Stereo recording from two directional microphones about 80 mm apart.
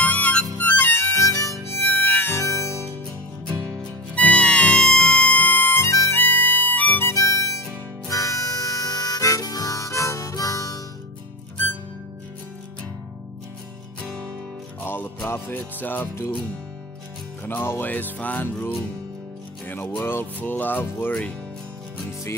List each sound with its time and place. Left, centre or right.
0.0 s harmonica: centre; by 1.6 s left
1.7 s harmonica: left
3.6 s music: centre
5.9 s music: left
6.1 s music: left
7.1 s music: left
8.1 s harmonica: left
14.8 s music: left
17.5 s music: left
20.0 s music: left